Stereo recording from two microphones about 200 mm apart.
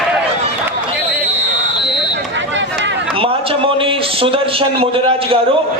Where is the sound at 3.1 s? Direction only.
25° right (ahead or behind).